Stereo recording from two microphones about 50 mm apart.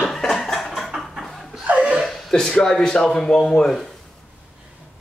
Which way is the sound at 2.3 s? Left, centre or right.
Centre.